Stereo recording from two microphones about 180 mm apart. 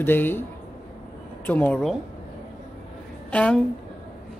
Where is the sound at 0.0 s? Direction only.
10° left (ahead or behind).